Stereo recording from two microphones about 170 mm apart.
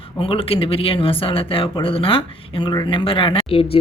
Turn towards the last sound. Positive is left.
turn(degrees=30)  # may be behind; listen again after turning